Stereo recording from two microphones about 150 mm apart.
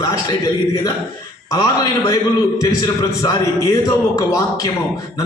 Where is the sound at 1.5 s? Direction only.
25° left (ahead or behind).